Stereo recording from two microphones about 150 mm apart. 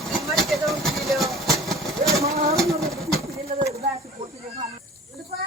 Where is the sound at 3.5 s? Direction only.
60° right (ahead or behind).